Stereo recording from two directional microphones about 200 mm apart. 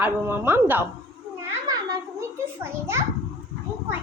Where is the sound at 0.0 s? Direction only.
10° right (ahead or behind).